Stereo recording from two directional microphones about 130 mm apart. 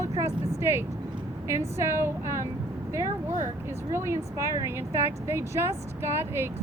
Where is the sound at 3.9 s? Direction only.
20° right (ahead or behind).